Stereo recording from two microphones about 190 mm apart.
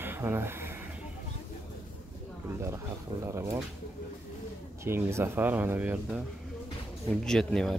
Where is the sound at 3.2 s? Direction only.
15° right (ahead or behind).